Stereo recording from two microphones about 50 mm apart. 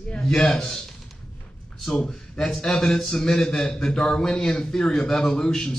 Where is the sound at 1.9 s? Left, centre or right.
Centre.